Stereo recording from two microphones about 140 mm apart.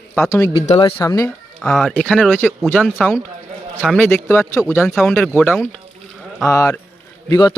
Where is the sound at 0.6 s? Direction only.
45° left (ahead or behind).